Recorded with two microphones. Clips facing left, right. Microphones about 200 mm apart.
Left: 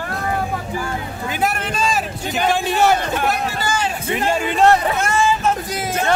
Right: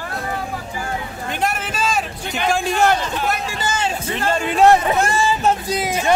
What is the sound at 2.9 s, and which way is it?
Speech, 55° left (ahead or behind).